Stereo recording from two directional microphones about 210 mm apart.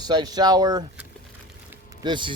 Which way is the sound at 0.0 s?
20° right (ahead or behind).